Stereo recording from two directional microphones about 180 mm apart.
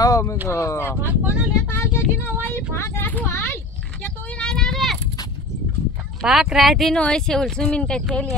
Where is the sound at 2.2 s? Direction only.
15° left (ahead or behind).